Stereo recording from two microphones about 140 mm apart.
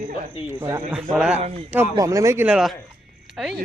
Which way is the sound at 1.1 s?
5° right (ahead or behind).